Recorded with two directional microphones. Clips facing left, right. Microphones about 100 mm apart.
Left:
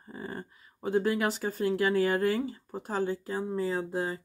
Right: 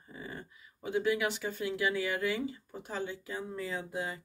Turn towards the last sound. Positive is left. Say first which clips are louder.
# left 6 dB
turn(degrees=35)  # may be behind; listen again after turning